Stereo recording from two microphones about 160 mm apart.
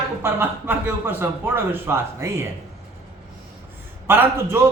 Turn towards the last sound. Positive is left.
turn(degrees=-15)  # may be behind; listen again after turning